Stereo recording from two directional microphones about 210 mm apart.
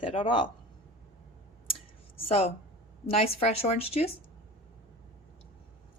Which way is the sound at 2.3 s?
30° left (ahead or behind).